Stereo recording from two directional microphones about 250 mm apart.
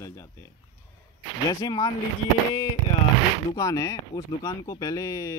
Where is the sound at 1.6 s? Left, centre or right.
Centre.